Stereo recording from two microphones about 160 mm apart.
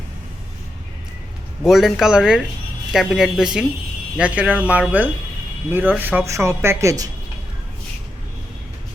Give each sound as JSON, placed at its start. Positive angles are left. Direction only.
{"t": 1.6, "sound": "speech", "side_deg": 0}